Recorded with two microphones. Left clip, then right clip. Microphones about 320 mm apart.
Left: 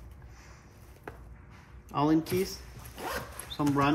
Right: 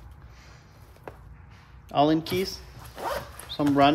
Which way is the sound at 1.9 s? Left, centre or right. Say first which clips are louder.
Right 5 dB; centre.